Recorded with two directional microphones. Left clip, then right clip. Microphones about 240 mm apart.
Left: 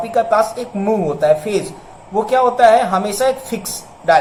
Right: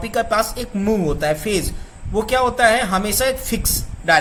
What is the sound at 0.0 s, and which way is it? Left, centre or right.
Speech, right.